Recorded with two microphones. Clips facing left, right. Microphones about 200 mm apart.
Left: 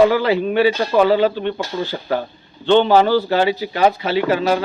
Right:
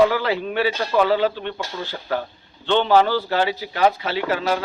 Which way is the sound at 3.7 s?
20° left (ahead or behind).